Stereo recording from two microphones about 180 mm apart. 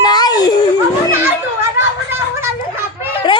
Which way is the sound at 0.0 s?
25° left (ahead or behind).